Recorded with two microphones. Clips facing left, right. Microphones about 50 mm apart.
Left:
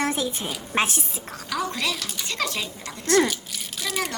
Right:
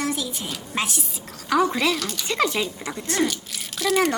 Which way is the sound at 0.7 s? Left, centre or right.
Left.